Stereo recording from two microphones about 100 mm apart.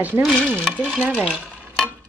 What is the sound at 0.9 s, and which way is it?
Speech, 15° right (ahead or behind).